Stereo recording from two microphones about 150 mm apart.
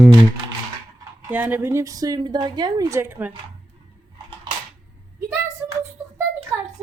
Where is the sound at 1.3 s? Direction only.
10° right (ahead or behind).